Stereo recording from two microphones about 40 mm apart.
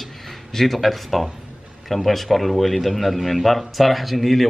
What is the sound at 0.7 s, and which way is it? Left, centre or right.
Speech, centre.